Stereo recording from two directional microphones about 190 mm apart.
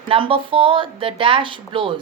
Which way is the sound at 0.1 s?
30° right (ahead or behind).